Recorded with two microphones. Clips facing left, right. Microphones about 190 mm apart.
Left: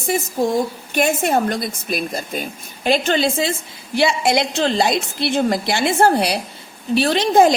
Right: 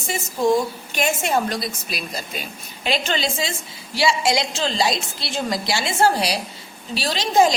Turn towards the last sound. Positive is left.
turn(degrees=55)  # may be behind; listen again after turning